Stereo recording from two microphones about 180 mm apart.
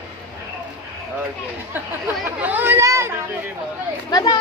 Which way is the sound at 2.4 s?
10° right (ahead or behind).